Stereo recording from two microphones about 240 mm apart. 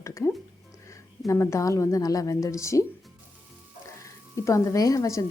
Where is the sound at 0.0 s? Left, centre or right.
Centre.